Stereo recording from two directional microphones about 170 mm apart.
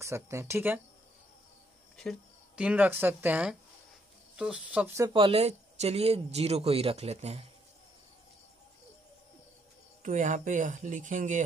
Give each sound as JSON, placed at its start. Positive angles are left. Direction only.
{"t": 0.0, "sound": "speech", "side_deg": -15}
{"t": 2.0, "sound": "speech", "side_deg": 0}
{"t": 5.1, "sound": "speech", "side_deg": -35}
{"t": 10.0, "sound": "speech", "side_deg": -45}